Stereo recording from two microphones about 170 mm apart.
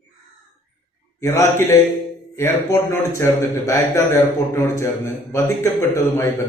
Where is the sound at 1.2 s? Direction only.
15° left (ahead or behind).